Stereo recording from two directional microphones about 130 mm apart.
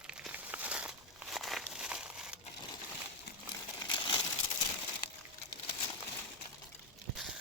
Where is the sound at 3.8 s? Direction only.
35° left (ahead or behind).